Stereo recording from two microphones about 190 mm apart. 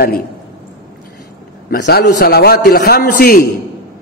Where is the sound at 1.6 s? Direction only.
60° left (ahead or behind).